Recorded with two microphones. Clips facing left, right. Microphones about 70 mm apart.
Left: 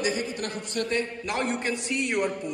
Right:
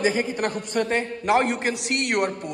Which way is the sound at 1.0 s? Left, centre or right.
Right.